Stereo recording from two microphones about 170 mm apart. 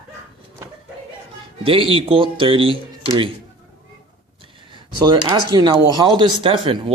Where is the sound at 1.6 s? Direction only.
30° right (ahead or behind).